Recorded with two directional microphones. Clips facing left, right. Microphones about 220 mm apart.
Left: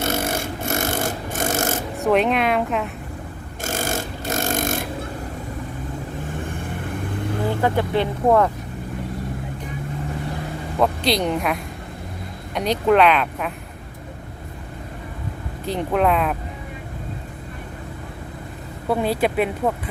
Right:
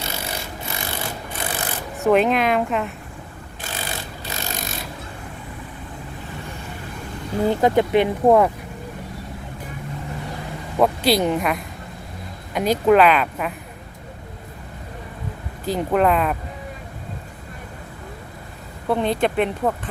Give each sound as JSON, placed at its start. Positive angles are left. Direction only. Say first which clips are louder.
{"t": 0.0, "sound": "a sound", "louder": "left 8 dB", "side_deg": 50}
{"t": 2.0, "sound": "a woman's voice", "louder": "right 2 dB", "side_deg": 0}
{"t": 3.6, "sound": "a sound", "louder": "left 7 dB", "side_deg": 45}
{"t": 6.3, "sound": "vehicle", "louder": "left 5 dB", "side_deg": 50}
{"t": 7.6, "sound": "speech", "louder": "right 4 dB", "side_deg": -15}
{"t": 10.8, "sound": "a woman's voice", "louder": "right 2 dB", "side_deg": -5}
{"t": 15.6, "sound": "a woman's voice", "louder": "right 1 dB", "side_deg": 0}
{"t": 18.9, "sound": "a woman's voice", "louder": "even", "side_deg": 5}